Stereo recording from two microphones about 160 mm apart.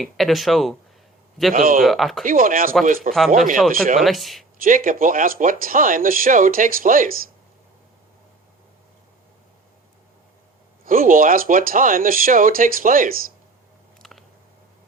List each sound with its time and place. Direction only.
0.0 s speech: centre (ahead or behind)
1.5 s speech: 60° right (ahead or behind)
1.8 s speech: centre (ahead or behind)
2.2 s speech: 60° right (ahead or behind)
3.9 s speech: centre (ahead or behind)
4.6 s speech: 60° right (ahead or behind)
10.8 s speech: 60° right (ahead or behind)
14.0 s a sound: centre (ahead or behind)